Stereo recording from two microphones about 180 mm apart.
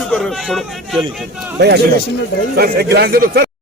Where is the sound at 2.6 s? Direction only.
60° right (ahead or behind).